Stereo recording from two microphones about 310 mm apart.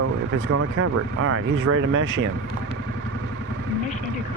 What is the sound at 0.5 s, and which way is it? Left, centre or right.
Speech, right.